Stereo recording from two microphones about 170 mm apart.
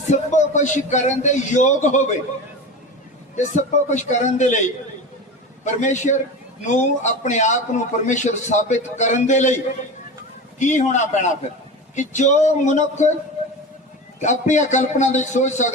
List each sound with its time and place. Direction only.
0.1 s a man's voice: 45° left (ahead or behind)
3.3 s a man's voice: 45° left (ahead or behind)
5.8 s a man's voice: 45° left (ahead or behind)
10.6 s a man's voice: 45° left (ahead or behind)
14.2 s a man's voice: 45° left (ahead or behind)